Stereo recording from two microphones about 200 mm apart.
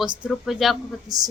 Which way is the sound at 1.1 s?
20° right (ahead or behind).